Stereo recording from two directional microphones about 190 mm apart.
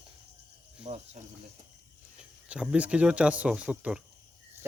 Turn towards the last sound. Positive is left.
turn(degrees=-5)  # may be behind; listen again after turning